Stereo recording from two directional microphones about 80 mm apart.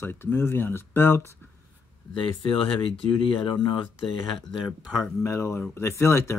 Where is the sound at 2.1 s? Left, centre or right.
Left.